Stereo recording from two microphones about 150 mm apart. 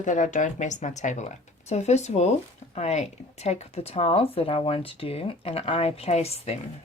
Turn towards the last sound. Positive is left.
turn(degrees=45)  # may be behind; listen again after turning